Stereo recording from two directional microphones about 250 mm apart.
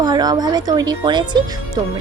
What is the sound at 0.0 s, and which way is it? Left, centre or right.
Speech, centre.